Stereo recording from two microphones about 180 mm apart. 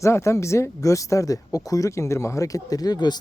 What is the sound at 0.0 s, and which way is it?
A man's voice, 15° left (ahead or behind).